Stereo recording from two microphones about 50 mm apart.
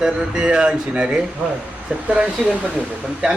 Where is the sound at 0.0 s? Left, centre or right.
Centre.